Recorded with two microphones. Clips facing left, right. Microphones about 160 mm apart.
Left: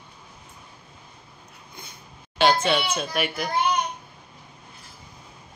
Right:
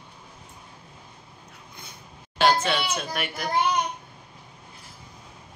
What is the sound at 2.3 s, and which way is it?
Speech, centre (ahead or behind).